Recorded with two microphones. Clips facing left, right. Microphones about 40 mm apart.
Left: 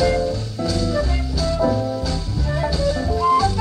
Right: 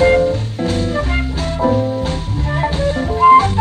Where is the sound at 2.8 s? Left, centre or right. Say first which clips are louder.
Right 9 dB; right.